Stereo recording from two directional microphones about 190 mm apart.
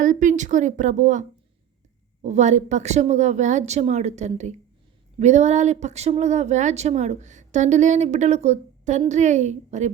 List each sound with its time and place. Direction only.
0.0 s speech: 40° right (ahead or behind)
2.2 s speech: 40° right (ahead or behind)